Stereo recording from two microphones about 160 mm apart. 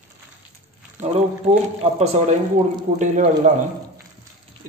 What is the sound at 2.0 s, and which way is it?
Speech, 45° right (ahead or behind).